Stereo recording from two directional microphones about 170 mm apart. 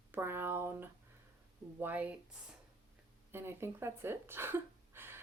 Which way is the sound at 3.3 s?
15° right (ahead or behind).